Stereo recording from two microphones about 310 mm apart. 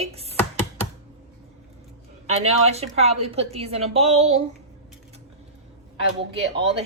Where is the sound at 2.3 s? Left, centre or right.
Centre.